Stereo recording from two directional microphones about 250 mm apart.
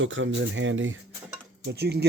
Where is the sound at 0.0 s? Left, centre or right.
Right.